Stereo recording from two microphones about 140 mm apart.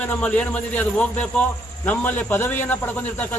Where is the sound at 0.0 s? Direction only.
10° left (ahead or behind).